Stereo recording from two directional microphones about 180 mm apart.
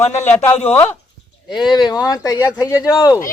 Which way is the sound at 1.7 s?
20° left (ahead or behind).